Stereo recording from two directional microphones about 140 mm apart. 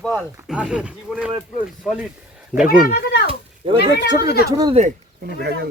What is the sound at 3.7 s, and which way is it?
Speech, 30° right (ahead or behind).